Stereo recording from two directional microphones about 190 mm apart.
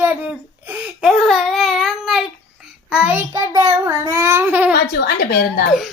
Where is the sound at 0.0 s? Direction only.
10° right (ahead or behind).